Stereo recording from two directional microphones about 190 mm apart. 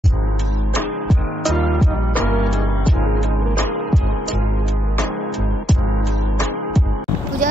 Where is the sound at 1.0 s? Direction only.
Centre (ahead or behind).